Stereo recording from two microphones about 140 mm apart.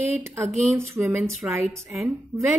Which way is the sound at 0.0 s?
15° right (ahead or behind).